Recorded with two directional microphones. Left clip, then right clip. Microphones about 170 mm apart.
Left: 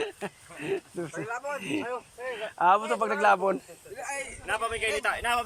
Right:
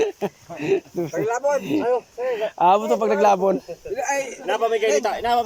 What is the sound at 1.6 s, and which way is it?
Speech, 20° right (ahead or behind).